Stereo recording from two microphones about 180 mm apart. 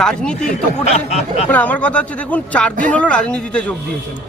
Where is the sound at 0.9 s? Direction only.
35° left (ahead or behind).